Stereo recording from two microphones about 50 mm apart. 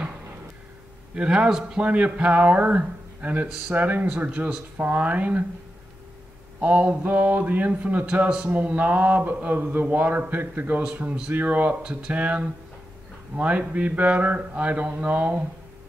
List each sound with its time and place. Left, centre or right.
1.1 s speech: centre
6.6 s speech: right
10.9 s speech: right